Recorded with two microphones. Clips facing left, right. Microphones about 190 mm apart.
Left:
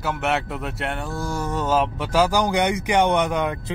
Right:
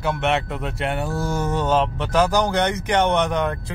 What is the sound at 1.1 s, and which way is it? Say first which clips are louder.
Speech: right 3 dB; 30° right (ahead or behind).